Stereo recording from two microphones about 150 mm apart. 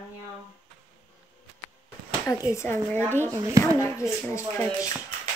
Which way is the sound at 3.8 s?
20° left (ahead or behind).